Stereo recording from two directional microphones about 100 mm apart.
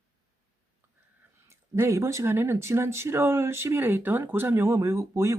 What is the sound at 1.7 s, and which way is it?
Speech, 30° right (ahead or behind).